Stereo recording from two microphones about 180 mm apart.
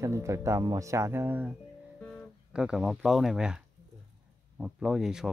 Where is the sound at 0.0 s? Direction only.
15° right (ahead or behind).